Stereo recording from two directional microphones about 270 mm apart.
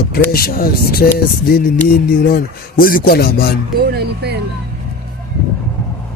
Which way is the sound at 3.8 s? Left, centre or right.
Right.